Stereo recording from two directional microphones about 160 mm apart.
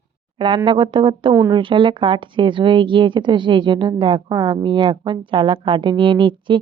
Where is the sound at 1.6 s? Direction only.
30° right (ahead or behind).